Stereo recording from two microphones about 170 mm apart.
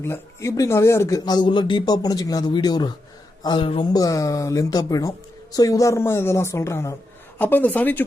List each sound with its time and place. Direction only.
0.0 s speech: 15° left (ahead or behind)